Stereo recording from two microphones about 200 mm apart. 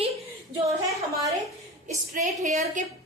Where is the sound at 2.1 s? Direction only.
35° right (ahead or behind).